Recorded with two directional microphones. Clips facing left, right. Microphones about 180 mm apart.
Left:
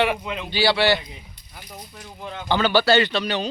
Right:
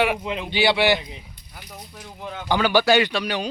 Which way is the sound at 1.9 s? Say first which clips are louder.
Right 1 dB; 5° right (ahead or behind).